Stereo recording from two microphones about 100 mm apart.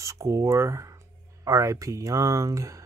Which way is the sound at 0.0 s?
30° right (ahead or behind).